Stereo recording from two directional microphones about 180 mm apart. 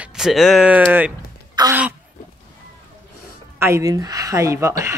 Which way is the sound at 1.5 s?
20° right (ahead or behind).